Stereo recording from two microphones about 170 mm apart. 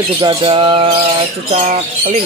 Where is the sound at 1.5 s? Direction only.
40° right (ahead or behind).